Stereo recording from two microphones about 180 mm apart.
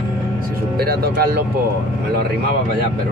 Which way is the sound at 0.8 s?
60° right (ahead or behind).